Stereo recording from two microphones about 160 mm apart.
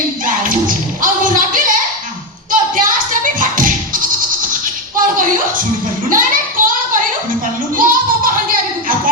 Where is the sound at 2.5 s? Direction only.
55° right (ahead or behind).